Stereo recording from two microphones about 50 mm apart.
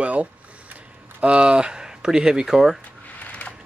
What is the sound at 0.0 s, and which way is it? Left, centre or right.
Speech, right.